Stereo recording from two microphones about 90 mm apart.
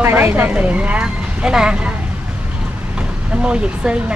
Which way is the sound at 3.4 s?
10° right (ahead or behind).